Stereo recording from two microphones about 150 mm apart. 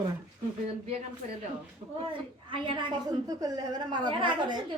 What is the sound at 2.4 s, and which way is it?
A woman's voice, 35° right (ahead or behind).